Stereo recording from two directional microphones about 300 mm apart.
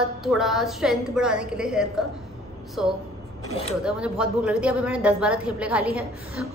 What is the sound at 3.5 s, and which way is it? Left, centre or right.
Speech, centre.